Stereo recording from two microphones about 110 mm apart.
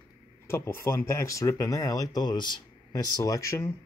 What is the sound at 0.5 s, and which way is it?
Speech, 25° left (ahead or behind).